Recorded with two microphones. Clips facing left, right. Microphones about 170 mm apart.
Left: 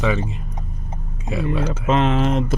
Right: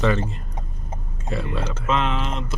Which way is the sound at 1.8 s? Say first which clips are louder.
Left 6 dB; 40° left (ahead or behind).